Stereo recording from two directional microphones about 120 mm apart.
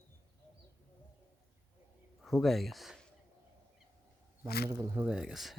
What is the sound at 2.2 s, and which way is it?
Speech, centre (ahead or behind).